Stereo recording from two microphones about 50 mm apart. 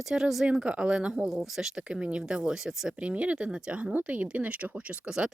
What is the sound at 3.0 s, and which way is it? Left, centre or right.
Speech, right.